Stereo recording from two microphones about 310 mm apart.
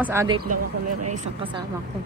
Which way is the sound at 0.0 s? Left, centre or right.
Centre.